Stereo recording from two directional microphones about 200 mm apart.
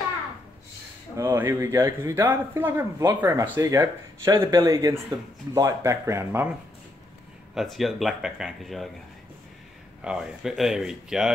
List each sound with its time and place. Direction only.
1.1 s speech: 15° right (ahead or behind)
7.5 s speech: centre (ahead or behind)
10.0 s speech: 5° right (ahead or behind)